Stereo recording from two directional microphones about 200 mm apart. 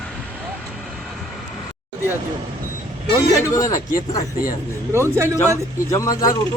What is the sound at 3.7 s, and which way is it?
Speech, 40° left (ahead or behind).